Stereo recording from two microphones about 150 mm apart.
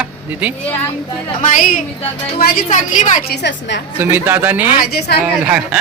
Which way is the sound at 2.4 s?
90° left.